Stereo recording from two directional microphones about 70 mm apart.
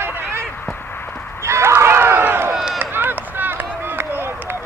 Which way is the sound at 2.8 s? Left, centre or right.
Right.